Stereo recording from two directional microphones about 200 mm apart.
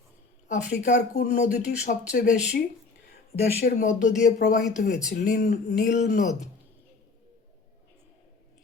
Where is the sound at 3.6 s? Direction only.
45° left (ahead or behind).